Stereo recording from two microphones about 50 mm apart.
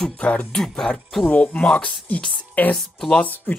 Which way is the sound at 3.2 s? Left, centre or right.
Left.